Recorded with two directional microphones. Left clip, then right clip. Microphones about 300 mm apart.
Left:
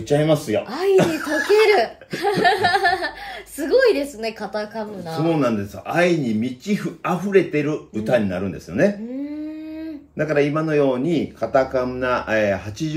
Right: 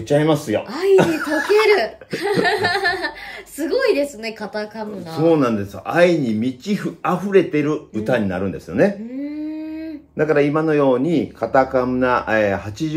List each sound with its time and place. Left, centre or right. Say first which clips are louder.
0.1 s speech: right 1 dB; centre
1.7 s speech: right 1 dB; centre
5.2 s speech: right 4 dB; centre
10.1 s speech: right 3 dB; centre